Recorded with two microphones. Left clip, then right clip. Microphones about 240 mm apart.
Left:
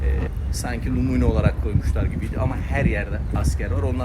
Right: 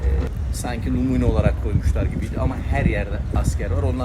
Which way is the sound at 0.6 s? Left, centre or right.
Centre.